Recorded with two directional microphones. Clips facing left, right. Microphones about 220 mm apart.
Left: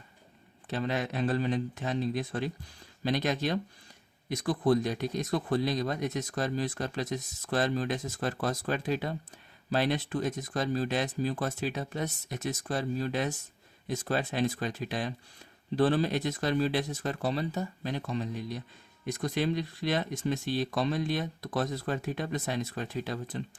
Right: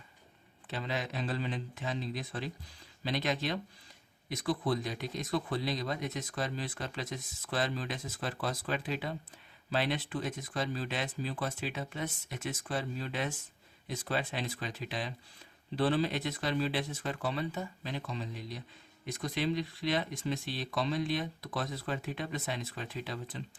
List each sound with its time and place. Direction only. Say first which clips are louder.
0.7 s speech: left 5 dB; 50° left (ahead or behind)